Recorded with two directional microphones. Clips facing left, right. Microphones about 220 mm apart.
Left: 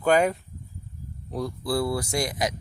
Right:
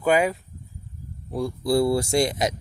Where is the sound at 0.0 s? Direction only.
5° right (ahead or behind).